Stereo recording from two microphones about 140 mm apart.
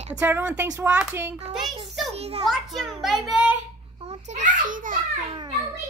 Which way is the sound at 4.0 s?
55° right (ahead or behind).